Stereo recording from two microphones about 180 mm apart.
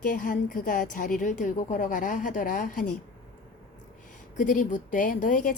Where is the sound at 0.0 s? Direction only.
50° left (ahead or behind).